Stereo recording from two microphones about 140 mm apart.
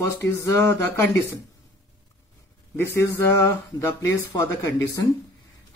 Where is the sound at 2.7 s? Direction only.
20° left (ahead or behind).